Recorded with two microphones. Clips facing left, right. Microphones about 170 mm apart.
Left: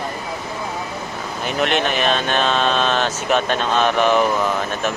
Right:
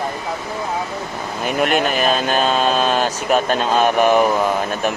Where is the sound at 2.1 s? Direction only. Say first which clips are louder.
Right 2 dB; 40° right (ahead or behind).